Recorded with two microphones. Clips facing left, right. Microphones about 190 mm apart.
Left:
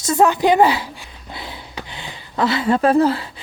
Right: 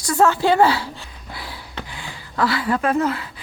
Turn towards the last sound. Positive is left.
turn(degrees=30)  # may be behind; listen again after turning